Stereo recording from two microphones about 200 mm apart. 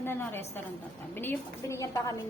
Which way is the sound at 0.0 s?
10° left (ahead or behind).